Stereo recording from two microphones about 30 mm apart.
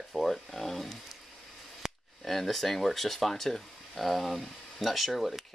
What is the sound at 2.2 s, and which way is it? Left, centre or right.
Speech, centre.